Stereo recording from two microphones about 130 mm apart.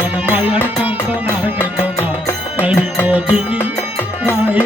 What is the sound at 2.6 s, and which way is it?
Music, 10° right (ahead or behind).